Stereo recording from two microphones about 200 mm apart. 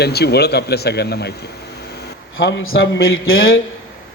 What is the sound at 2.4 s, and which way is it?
Speech, 80° left.